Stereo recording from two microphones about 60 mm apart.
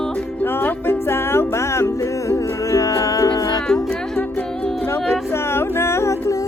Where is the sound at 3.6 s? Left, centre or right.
Centre.